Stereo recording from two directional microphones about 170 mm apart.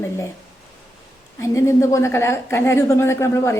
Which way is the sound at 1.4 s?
15° left (ahead or behind).